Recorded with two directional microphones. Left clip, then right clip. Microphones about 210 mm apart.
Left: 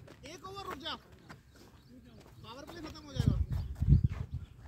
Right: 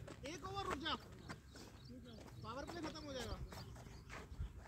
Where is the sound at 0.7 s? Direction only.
50° left (ahead or behind).